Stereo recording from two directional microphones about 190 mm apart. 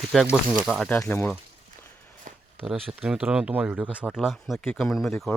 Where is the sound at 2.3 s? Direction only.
40° right (ahead or behind).